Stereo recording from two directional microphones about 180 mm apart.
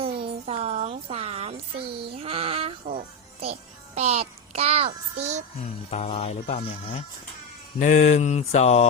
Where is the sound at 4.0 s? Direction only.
35° right (ahead or behind).